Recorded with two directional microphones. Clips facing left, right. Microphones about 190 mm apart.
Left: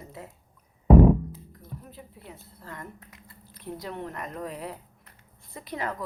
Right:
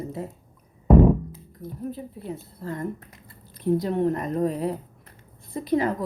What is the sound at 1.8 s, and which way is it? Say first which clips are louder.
A woman's voice: right 13 dB; 35° right (ahead or behind).